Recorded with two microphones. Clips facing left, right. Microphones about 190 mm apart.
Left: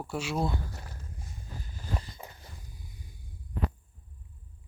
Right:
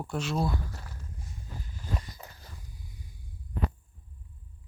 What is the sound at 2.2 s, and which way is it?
Dog, 15° left (ahead or behind).